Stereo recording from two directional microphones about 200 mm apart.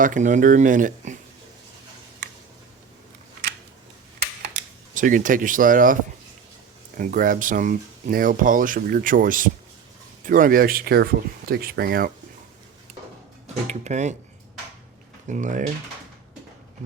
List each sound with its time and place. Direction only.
0.0 s speech: 40° right (ahead or behind)
4.9 s speech: 40° right (ahead or behind)
13.7 s speech: 35° right (ahead or behind)
15.3 s speech: 40° right (ahead or behind)